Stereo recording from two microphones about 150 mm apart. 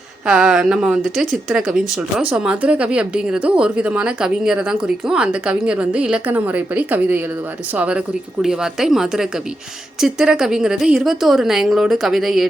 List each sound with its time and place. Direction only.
0.3 s a woman's voice: 5° right (ahead or behind)